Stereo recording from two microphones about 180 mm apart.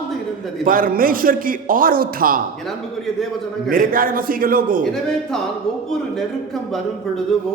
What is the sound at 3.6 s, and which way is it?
Speech, 50° right (ahead or behind).